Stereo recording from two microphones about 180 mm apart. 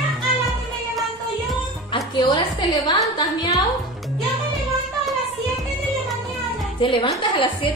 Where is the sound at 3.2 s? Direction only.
20° left (ahead or behind).